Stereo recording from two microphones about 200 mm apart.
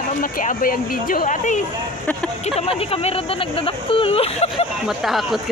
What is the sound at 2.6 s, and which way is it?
Speech, 30° left (ahead or behind).